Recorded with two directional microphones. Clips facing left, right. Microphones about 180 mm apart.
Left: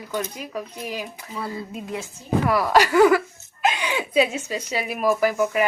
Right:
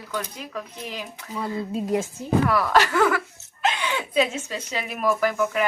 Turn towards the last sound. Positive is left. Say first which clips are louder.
# left 2 dB
turn(degrees=10)  # may be behind; listen again after turning